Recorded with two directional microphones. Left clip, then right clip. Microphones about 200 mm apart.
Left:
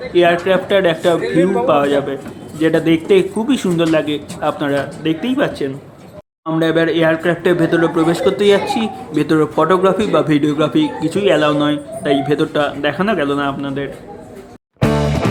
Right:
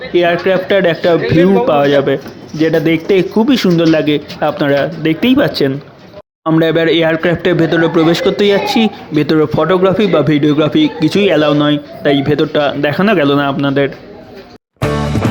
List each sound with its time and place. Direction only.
0.1 s a man's voice: 25° right (ahead or behind)
9.6 s a man's voice: 20° right (ahead or behind)
14.8 s music: centre (ahead or behind)